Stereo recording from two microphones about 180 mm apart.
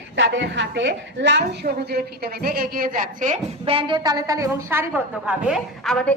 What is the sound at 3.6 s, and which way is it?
A woman's voice, 30° right (ahead or behind).